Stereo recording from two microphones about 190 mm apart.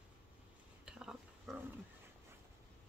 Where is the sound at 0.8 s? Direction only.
5° right (ahead or behind).